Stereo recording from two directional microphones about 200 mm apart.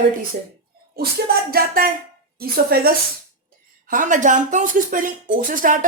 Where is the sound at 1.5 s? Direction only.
45° right (ahead or behind).